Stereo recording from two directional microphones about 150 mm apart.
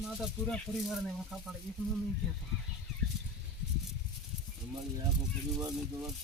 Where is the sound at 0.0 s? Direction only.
Centre (ahead or behind).